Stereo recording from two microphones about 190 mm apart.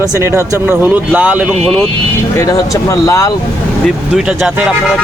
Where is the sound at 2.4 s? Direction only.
20° left (ahead or behind).